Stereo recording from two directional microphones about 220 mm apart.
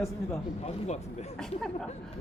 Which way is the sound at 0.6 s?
30° left (ahead or behind).